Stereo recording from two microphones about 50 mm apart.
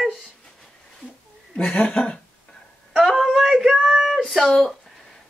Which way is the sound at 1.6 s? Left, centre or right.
Left.